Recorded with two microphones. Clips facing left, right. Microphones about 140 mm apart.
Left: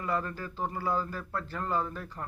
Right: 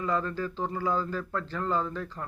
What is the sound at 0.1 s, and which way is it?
Speech, 10° left (ahead or behind).